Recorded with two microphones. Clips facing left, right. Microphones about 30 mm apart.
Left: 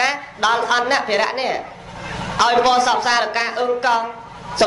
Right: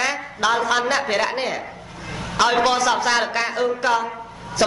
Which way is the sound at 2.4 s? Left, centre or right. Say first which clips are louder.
Left 3 dB; centre.